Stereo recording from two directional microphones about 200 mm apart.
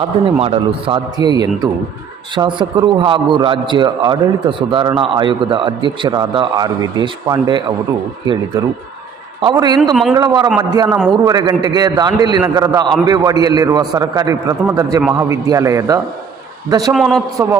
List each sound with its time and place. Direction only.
0.3 s a man's voice: 30° right (ahead or behind)
9.4 s a man's voice: 20° right (ahead or behind)
9.9 s a man's voice: centre (ahead or behind)
10.2 s a man's voice: 20° right (ahead or behind)
16.9 s a man's voice: centre (ahead or behind)
17.3 s a man's voice: 15° right (ahead or behind)